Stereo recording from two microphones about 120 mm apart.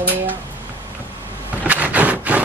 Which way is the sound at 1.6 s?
15° right (ahead or behind).